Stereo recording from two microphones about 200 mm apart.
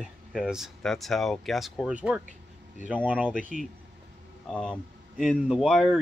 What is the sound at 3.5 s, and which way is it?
Speech, 40° right (ahead or behind).